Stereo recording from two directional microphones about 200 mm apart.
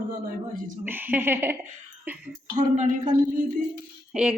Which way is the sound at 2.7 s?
35° right (ahead or behind).